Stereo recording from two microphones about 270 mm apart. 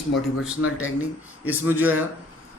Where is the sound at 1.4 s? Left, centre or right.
Centre.